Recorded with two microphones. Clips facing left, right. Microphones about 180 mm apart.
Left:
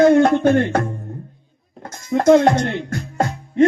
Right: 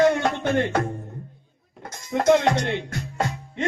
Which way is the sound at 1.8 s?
45° left (ahead or behind).